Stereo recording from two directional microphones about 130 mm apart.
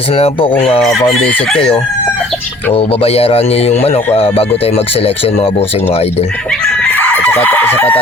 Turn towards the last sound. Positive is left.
turn(degrees=15)  # may be behind; listen again after turning